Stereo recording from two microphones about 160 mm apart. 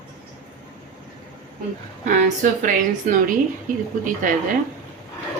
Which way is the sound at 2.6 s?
55° right (ahead or behind).